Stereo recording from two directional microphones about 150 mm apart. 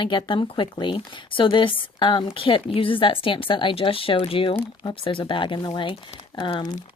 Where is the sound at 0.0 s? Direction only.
30° left (ahead or behind).